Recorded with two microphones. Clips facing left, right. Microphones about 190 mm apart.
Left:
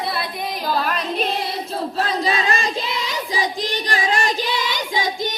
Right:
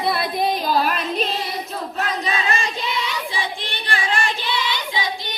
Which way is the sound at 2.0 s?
35° left (ahead or behind).